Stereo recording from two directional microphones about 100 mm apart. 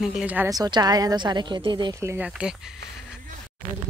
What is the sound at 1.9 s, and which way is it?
Speech, 30° right (ahead or behind).